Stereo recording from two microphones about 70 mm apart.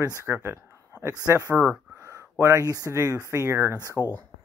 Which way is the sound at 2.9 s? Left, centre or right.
Right.